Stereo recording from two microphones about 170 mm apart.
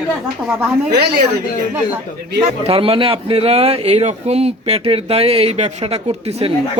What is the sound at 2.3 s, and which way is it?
A man's voice, 35° right (ahead or behind).